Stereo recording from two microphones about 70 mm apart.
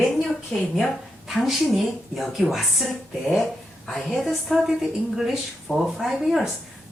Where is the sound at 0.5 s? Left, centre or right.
Centre.